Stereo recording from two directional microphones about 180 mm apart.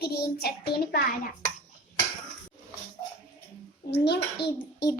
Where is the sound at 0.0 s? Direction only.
60° left (ahead or behind).